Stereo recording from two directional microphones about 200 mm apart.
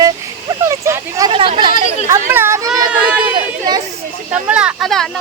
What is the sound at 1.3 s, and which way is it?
Speech, 25° right (ahead or behind).